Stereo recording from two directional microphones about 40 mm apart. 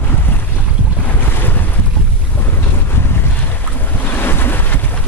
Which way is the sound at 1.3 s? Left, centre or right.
Left.